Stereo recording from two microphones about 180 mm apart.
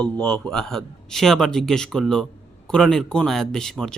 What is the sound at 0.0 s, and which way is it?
A man's voice, 5° left (ahead or behind).